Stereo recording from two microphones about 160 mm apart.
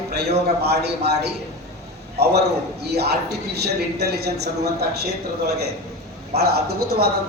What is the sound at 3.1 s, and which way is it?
A man's voice, 90° right.